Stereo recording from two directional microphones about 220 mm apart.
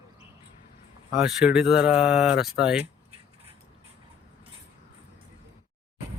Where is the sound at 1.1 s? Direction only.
5° right (ahead or behind).